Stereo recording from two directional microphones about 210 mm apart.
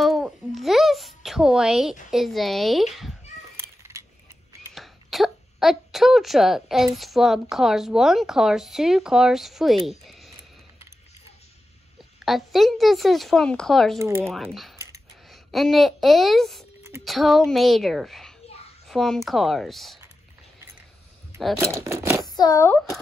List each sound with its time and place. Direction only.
0.0 s babbling: centre (ahead or behind)
2.0 s speech: centre (ahead or behind)
4.7 s speech: centre (ahead or behind)
12.3 s speech: centre (ahead or behind)
13.9 s speech: 15° right (ahead or behind)
14.2 s speech: centre (ahead or behind)
21.7 s speech: 10° right (ahead or behind)
22.2 s a child's voice: 20° left (ahead or behind)